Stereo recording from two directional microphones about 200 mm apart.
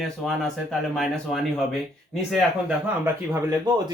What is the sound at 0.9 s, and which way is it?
Speech, centre (ahead or behind).